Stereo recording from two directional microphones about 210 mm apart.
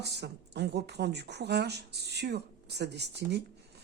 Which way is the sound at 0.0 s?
50° right (ahead or behind).